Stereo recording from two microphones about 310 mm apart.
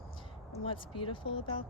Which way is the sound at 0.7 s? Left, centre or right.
Centre.